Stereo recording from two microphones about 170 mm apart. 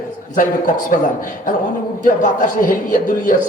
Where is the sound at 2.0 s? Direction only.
50° left (ahead or behind).